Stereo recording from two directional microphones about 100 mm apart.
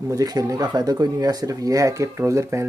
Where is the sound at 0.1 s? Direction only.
40° right (ahead or behind).